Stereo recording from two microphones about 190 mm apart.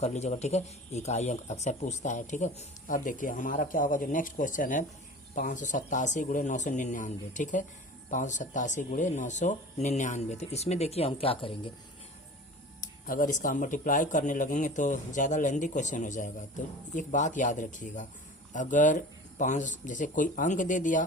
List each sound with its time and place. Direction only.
0.0 s a man's voice: 35° left (ahead or behind)
13.1 s a man's voice: 45° left (ahead or behind)